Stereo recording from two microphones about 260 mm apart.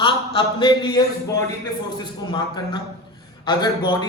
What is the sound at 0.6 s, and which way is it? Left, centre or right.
A man's voice, centre.